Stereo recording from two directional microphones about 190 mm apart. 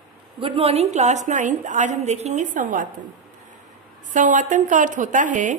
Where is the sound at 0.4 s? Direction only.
30° right (ahead or behind).